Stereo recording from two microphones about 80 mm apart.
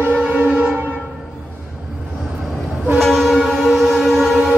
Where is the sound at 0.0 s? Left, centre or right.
Centre.